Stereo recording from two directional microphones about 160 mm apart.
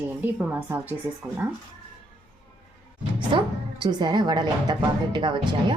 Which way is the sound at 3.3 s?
30° right (ahead or behind).